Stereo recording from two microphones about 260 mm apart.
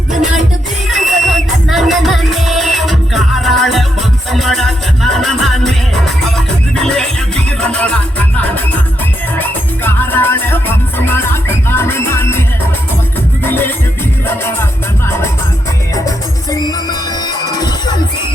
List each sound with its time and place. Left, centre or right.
0.9 s music: centre
7.6 s music: centre
9.4 s music: centre
13.4 s music: centre
17.5 s music: centre